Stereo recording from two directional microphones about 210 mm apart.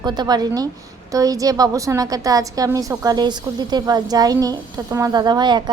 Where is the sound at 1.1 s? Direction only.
15° right (ahead or behind).